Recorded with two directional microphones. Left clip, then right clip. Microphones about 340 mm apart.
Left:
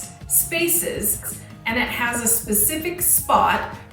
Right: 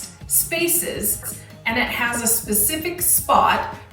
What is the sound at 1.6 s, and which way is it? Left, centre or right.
A woman's voice, centre.